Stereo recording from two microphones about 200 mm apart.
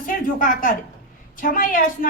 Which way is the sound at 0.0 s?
45° left (ahead or behind).